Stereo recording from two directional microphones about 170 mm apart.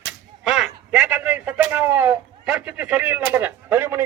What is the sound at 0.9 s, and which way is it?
A man's voice, 5° right (ahead or behind).